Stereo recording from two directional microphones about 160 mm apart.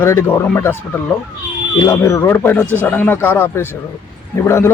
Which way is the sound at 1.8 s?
20° left (ahead or behind).